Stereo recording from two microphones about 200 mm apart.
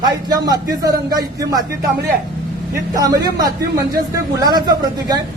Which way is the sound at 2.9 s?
20° right (ahead or behind).